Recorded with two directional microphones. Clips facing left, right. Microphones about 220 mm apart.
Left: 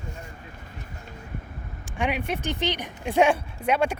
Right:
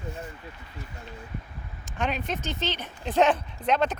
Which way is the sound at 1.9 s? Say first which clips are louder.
Left 2 dB; 15° left (ahead or behind).